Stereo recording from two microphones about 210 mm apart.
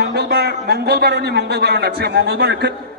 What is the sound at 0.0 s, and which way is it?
A man's voice, 50° right (ahead or behind).